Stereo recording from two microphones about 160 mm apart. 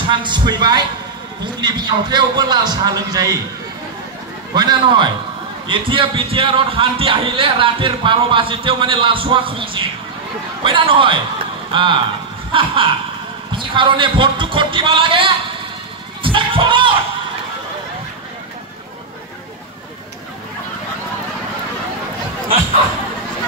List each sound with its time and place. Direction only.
0.0 s a man's voice: 30° right (ahead or behind)
4.6 s a man's voice: 30° right (ahead or behind)
16.2 s music: 30° right (ahead or behind)